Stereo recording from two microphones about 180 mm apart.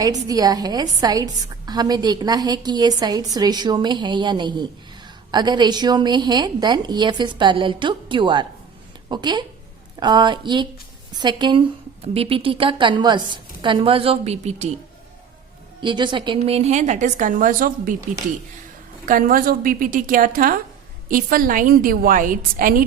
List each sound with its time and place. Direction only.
0.0 s a woman's voice: 20° right (ahead or behind); by 14.7 s 40° right (ahead or behind)
15.8 s a woman's voice: 25° right (ahead or behind); by 17.9 s 50° right (ahead or behind)
19.0 s a woman's voice: 50° right (ahead or behind)